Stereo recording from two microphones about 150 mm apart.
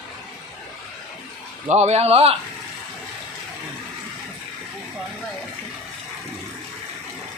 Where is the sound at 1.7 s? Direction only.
45° right (ahead or behind).